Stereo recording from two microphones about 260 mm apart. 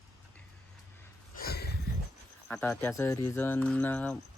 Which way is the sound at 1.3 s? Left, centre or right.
Left.